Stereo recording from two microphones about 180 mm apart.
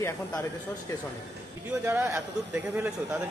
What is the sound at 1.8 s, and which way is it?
Speech, 10° right (ahead or behind).